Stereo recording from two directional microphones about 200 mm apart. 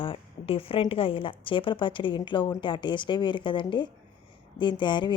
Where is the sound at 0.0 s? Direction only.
25° left (ahead or behind).